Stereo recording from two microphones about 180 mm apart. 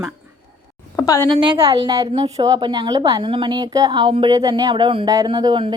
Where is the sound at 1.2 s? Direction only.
25° right (ahead or behind).